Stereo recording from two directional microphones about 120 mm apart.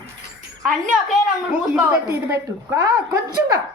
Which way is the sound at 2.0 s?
25° right (ahead or behind).